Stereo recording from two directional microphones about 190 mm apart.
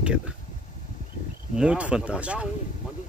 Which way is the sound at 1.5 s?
5° right (ahead or behind).